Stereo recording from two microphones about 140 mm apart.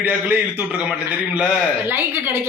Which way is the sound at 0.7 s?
10° right (ahead or behind).